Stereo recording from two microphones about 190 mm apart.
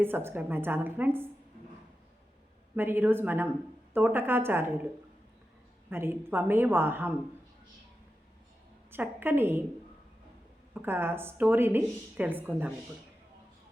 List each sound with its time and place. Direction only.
0.0 s speech: 10° right (ahead or behind)
2.7 s speech: 10° right (ahead or behind)
5.9 s speech: 10° right (ahead or behind)
8.9 s speech: 10° right (ahead or behind)
10.8 s speech: 10° right (ahead or behind)